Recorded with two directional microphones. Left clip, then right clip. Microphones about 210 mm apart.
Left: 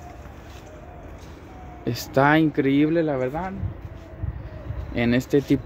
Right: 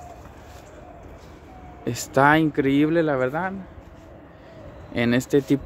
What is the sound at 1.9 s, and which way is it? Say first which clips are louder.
Speech: right 1 dB; 5° right (ahead or behind).